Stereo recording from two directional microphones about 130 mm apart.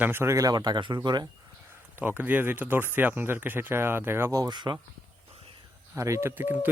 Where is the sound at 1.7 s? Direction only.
15° right (ahead or behind); by 4.8 s 35° right (ahead or behind).